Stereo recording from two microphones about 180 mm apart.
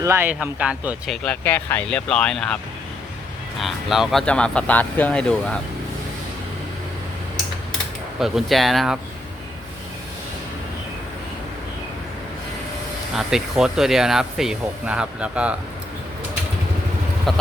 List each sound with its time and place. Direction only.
0.0 s speech: 15° right (ahead or behind); by 2.6 s 5° left (ahead or behind)
3.6 s speech: centre (ahead or behind)
8.2 s speech: centre (ahead or behind)
13.1 s speech: centre (ahead or behind)
17.3 s speech: centre (ahead or behind)